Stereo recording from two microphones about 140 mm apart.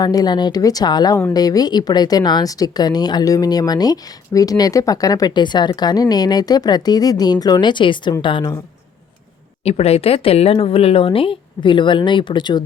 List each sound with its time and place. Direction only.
0.0 s speech: 25° left (ahead or behind)
9.6 s speech: 45° left (ahead or behind)